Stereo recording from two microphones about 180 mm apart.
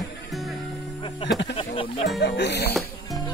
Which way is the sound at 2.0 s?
70° left (ahead or behind).